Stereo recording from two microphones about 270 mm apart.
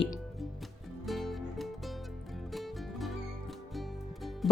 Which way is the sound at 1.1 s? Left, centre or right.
Centre.